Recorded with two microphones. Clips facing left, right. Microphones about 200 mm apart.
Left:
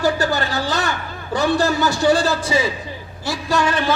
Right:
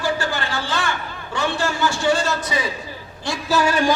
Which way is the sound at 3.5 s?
10° right (ahead or behind).